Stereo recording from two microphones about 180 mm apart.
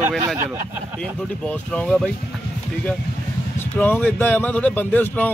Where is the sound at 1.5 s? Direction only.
5° left (ahead or behind).